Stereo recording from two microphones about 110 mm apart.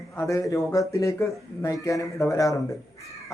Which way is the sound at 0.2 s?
30° left (ahead or behind).